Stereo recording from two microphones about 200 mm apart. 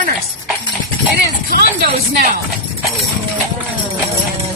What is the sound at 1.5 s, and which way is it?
Speech, 50° right (ahead or behind).